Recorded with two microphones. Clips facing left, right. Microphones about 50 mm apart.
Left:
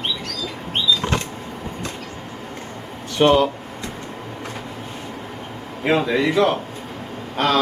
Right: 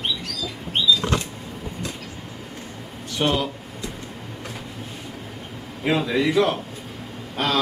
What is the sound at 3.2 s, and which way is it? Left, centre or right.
Speech, left.